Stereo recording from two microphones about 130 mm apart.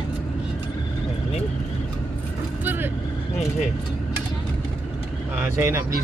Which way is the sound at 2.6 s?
15° right (ahead or behind).